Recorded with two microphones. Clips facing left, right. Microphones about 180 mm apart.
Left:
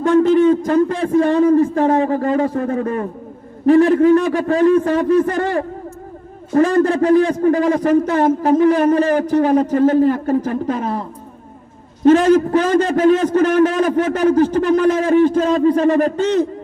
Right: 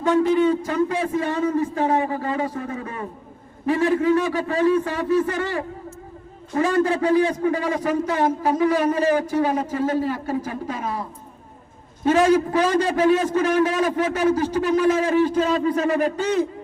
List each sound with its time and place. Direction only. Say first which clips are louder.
0.2 s a man's voice: left 6 dB; 55° left (ahead or behind)
12.5 s a man's voice: left 5 dB; 50° left (ahead or behind)